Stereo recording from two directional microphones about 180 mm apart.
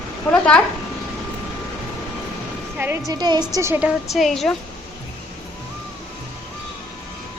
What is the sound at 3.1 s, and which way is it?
A woman's voice, 20° right (ahead or behind).